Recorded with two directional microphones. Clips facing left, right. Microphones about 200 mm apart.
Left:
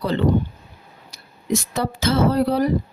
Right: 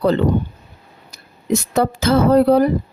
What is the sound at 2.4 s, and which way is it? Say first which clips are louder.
Speech: right 6 dB; 55° right (ahead or behind).